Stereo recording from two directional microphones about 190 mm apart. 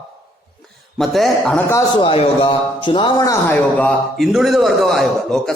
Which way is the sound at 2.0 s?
30° left (ahead or behind).